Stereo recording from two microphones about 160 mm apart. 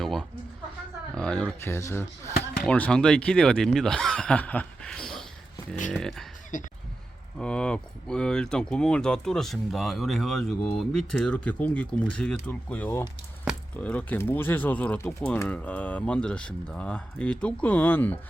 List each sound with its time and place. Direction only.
0.0 s a sound: centre (ahead or behind)
1.1 s speech: 5° left (ahead or behind)
6.5 s speech: 50° left (ahead or behind)
7.3 s speech: 5° left (ahead or behind)
13.5 s a sound: 5° right (ahead or behind)
13.8 s speech: 10° left (ahead or behind)